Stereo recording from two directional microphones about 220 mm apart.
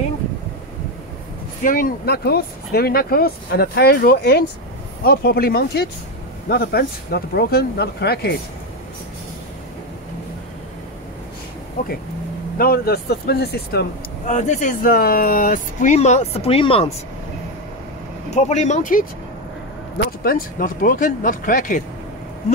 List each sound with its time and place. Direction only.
1.6 s speech: 40° left (ahead or behind)
12.5 s speech: 45° left (ahead or behind)
14.2 s speech: 35° left (ahead or behind)
18.3 s speech: 30° left (ahead or behind)
20.1 s speech: 40° left (ahead or behind)